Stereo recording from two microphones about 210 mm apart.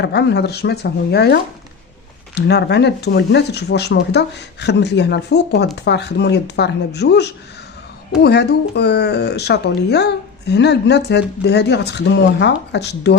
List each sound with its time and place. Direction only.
0.0 s speech: 55° left (ahead or behind)